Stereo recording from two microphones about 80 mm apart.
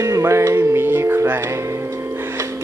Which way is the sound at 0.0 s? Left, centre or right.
Right.